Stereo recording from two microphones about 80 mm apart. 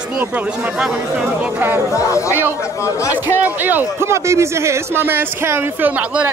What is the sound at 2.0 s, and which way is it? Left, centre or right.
Speech, left.